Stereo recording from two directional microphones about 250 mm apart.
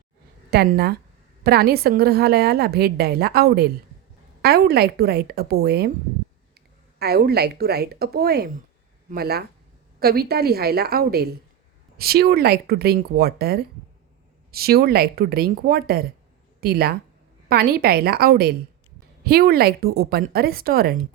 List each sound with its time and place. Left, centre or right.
0.5 s a woman's voice: right
7.0 s a woman's voice: right